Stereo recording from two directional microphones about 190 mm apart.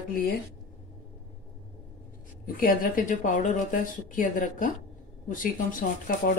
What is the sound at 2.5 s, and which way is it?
Speech, 45° left (ahead or behind).